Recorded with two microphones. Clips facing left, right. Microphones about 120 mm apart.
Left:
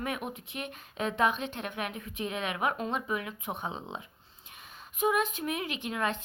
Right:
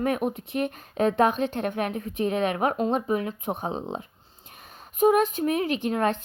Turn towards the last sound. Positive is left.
turn(degrees=-40)  # may be behind; listen again after turning